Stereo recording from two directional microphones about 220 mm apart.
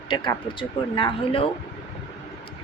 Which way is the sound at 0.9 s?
25° left (ahead or behind).